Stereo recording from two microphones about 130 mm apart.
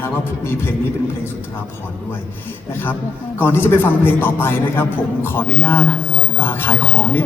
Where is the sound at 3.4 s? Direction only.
15° left (ahead or behind).